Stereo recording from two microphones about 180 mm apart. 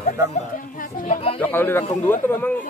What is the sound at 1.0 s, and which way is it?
Speech, 35° left (ahead or behind).